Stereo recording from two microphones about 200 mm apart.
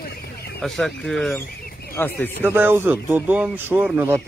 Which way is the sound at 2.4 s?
10° right (ahead or behind).